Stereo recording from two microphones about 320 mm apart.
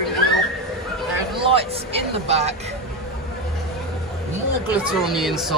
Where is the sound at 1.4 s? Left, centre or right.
Centre.